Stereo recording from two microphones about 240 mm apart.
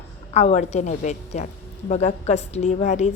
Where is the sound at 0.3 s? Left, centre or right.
Left.